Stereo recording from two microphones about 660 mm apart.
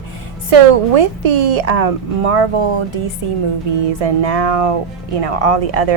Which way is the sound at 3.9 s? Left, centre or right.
Right.